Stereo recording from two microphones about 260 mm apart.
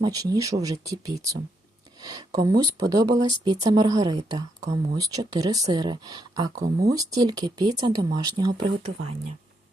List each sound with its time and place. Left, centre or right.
0.0 s speech: centre
6.7 s speech: right
6.9 s speech: centre